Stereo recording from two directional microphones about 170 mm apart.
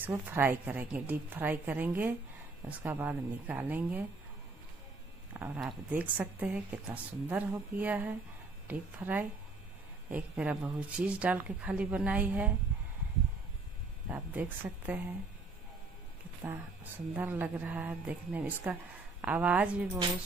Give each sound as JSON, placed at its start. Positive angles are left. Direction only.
{"t": 0.0, "sound": "speech", "side_deg": -10}
{"t": 5.6, "sound": "speech", "side_deg": -5}
{"t": 14.0, "sound": "speech", "side_deg": -10}
{"t": 16.4, "sound": "speech", "side_deg": -10}